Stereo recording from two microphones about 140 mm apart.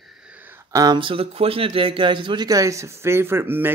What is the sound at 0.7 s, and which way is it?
A man's voice, 25° right (ahead or behind).